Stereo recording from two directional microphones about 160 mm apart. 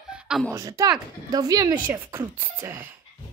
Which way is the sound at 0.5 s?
20° right (ahead or behind).